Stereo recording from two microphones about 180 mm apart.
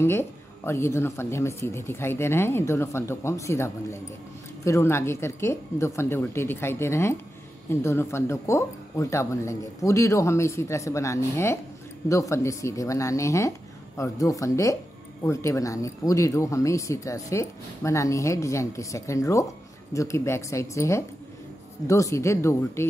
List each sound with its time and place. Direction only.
0.0 s speech: 15° left (ahead or behind)